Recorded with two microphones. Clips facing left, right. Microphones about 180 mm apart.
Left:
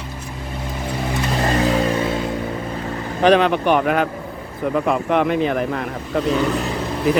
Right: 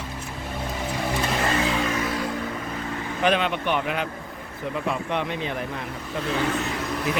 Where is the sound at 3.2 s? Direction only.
40° left (ahead or behind); by 5.9 s 65° left (ahead or behind).